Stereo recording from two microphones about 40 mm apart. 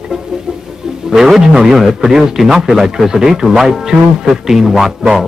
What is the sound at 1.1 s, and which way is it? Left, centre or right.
A man's voice, centre.